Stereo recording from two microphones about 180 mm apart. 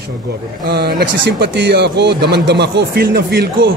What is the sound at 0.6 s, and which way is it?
A man's voice, 60° right (ahead or behind).